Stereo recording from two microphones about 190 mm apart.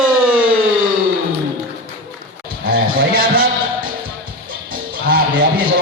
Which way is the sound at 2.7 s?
50° right (ahead or behind).